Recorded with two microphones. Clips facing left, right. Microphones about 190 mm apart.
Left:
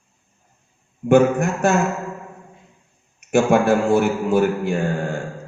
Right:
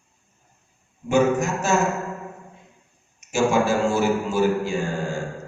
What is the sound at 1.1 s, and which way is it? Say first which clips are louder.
Speech: left 4 dB; 60° left (ahead or behind).